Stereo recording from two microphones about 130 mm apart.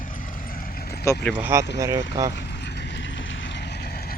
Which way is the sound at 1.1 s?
25° left (ahead or behind).